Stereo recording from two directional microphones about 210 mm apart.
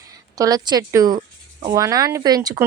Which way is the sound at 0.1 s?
15° right (ahead or behind).